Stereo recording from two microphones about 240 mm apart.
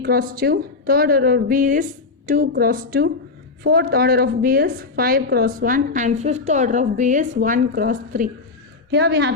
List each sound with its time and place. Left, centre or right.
0.0 s a woman's voice: right
8.9 s a woman's voice: right